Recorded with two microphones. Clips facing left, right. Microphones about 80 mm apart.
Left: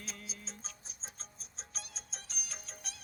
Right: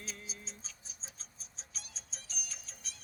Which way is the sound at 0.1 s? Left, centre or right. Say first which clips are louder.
Even; left.